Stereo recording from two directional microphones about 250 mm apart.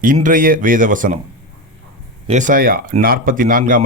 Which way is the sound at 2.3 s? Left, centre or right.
Right.